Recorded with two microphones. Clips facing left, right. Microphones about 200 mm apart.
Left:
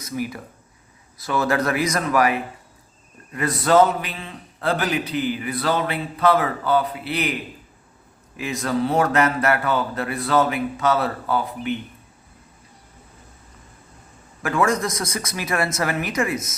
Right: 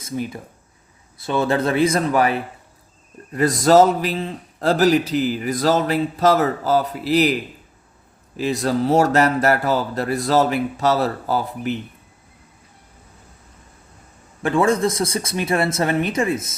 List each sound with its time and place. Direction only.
0.0 s a man's voice: 25° right (ahead or behind)
8.4 s a man's voice: 35° right (ahead or behind)
14.4 s speech: 30° right (ahead or behind)